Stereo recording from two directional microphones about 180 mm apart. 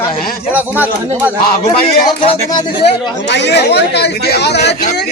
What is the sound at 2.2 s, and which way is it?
Speech, 30° left (ahead or behind).